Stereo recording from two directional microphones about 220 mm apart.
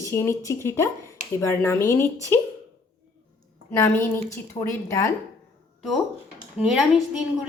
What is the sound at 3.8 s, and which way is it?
Speech, 10° left (ahead or behind).